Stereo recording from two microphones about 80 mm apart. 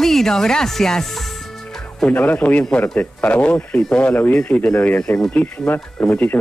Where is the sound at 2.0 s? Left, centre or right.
Centre.